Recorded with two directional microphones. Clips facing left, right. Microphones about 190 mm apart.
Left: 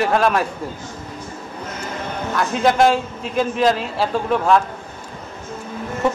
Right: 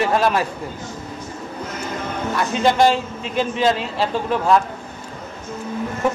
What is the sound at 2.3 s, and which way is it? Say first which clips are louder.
A man's voice: left 1 dB; centre (ahead or behind).